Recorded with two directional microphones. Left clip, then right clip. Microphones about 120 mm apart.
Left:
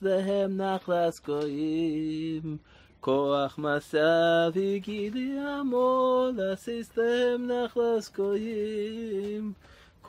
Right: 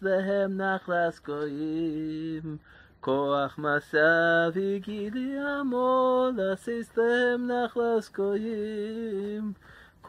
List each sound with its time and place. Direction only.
0.0 s mantra: 20° left (ahead or behind)
3.0 s mantra: 15° left (ahead or behind); by 8.5 s 35° right (ahead or behind)
8.6 s a sound: 35° right (ahead or behind)